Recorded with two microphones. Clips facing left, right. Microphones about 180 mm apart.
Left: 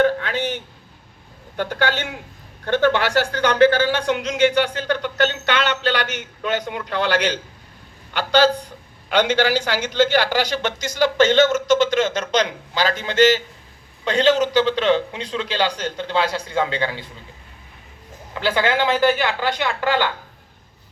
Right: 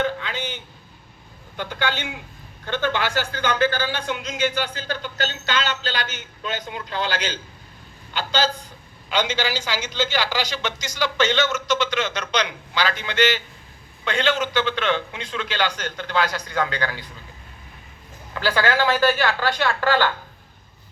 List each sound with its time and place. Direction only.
0.2 s a sound: 65° left (ahead or behind)
1.5 s a man's voice: 60° left (ahead or behind); by 17.1 s 25° left (ahead or behind)
18.3 s a woman's voice: 20° left (ahead or behind)